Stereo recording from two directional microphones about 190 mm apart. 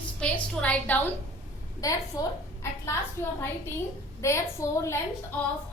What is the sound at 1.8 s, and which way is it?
Speech, 20° left (ahead or behind).